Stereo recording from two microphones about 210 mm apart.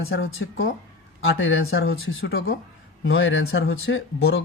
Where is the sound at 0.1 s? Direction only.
70° left (ahead or behind).